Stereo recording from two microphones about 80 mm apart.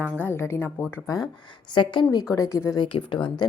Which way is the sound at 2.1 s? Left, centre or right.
Left.